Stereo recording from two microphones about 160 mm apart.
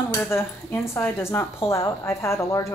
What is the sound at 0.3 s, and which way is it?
A woman's voice, 15° left (ahead or behind).